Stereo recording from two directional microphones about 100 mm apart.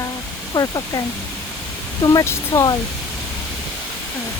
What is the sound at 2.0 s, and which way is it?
Speech, 40° left (ahead or behind).